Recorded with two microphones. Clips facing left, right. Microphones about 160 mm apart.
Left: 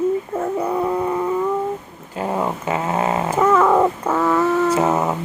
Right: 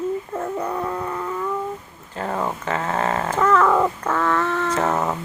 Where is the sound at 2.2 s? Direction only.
15° left (ahead or behind).